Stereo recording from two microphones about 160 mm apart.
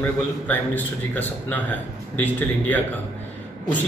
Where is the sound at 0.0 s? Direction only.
10° left (ahead or behind).